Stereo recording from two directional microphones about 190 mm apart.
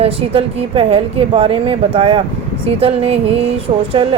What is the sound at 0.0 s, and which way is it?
A woman's voice, 30° right (ahead or behind).